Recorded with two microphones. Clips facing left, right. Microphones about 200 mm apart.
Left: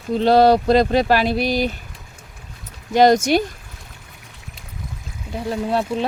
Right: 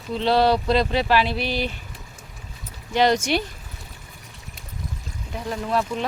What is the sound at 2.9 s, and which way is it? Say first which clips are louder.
Speech: left 6 dB; 45° left (ahead or behind).